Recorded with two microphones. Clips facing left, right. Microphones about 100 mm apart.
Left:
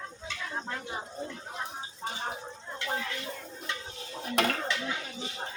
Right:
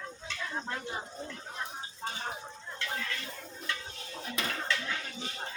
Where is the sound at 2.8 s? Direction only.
20° left (ahead or behind).